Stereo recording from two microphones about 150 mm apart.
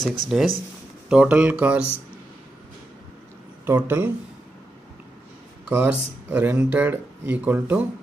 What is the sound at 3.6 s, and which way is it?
Speech, 15° right (ahead or behind).